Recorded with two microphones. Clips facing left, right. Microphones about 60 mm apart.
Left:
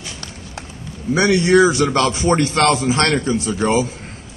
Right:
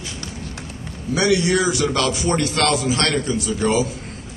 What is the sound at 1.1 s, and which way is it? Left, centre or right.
A man's voice, left.